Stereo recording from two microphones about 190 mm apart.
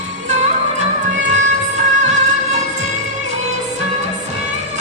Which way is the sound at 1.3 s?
35° right (ahead or behind).